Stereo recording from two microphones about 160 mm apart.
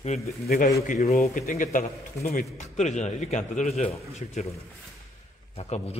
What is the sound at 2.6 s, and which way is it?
A man's voice, 45° left (ahead or behind).